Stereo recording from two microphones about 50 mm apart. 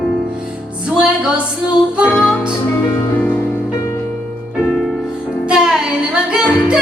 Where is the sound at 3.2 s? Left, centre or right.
Left.